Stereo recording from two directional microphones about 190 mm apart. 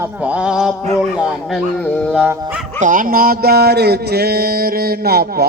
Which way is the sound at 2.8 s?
45° right (ahead or behind).